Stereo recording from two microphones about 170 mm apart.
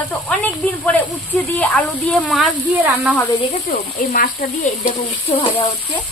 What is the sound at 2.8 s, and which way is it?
Speech, 10° right (ahead or behind).